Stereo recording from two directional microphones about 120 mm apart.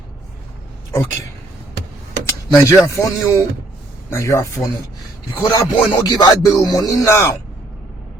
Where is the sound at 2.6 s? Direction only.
25° left (ahead or behind).